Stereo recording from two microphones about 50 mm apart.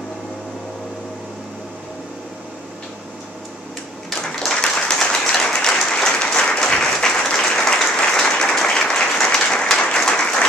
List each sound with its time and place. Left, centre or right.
4.5 s applause: centre